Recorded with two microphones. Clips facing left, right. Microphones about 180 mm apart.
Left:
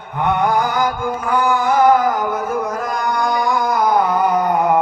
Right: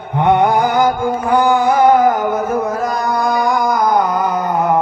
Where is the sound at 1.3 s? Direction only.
35° right (ahead or behind).